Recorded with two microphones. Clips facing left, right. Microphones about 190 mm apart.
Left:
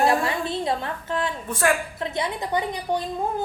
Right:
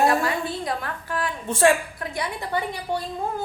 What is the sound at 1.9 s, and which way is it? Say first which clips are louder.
A woman's voice: left 3 dB; 25° left (ahead or behind).